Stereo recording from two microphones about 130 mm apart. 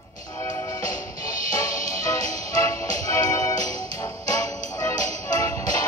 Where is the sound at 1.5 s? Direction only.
25° left (ahead or behind).